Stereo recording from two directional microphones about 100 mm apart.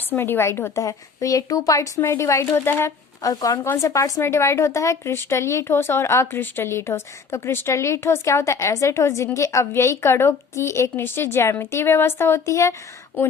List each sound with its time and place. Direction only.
0.1 s a woman's voice: 20° left (ahead or behind)
3.2 s a woman's voice: 35° left (ahead or behind)